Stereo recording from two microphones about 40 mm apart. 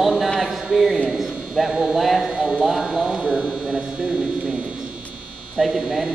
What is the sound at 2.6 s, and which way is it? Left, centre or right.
Clip-clop, centre.